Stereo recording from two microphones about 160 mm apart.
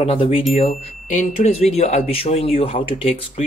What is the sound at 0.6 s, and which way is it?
Speech, 50° left (ahead or behind).